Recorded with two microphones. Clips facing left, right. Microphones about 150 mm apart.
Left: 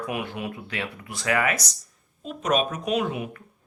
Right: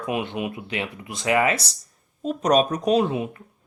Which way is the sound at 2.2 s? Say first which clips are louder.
Right 5 dB; 40° right (ahead or behind).